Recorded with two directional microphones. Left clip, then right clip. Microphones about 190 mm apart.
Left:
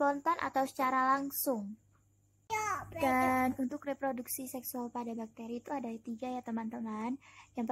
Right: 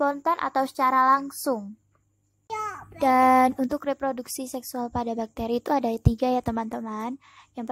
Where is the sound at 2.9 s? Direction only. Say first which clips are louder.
Right 13 dB; 30° right (ahead or behind).